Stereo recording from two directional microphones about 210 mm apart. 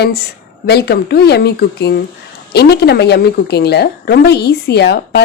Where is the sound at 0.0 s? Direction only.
50° left (ahead or behind).